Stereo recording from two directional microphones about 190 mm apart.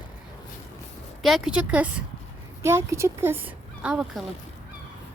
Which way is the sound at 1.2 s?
5° right (ahead or behind).